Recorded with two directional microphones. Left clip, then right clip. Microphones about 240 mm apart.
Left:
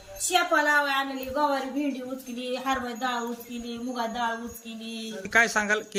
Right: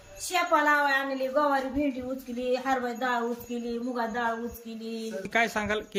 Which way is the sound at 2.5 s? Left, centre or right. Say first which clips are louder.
Right 1 dB; centre.